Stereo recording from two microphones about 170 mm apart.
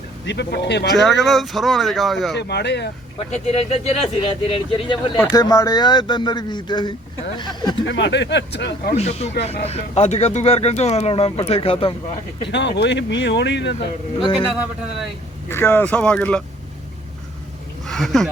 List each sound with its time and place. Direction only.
0.3 s speech: 90° left
0.9 s speech: centre (ahead or behind)
2.3 s speech: 75° left (ahead or behind)
3.3 s speech: 40° left (ahead or behind)
5.3 s speech: 20° left (ahead or behind)
7.9 s speech: 90° left
9.0 s speech: 40° left (ahead or behind)
12.5 s speech: 90° left
15.4 s speech: 15° left (ahead or behind)
17.8 s speech: centre (ahead or behind)